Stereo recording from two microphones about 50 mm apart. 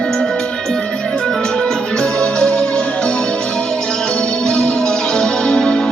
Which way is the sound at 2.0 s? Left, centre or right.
Left.